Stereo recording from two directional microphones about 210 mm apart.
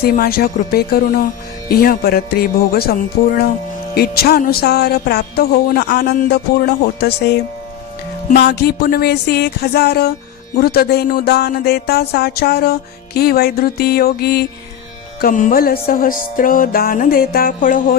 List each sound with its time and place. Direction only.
0.0 s speech: 45° left (ahead or behind)
15.2 s music: 40° left (ahead or behind)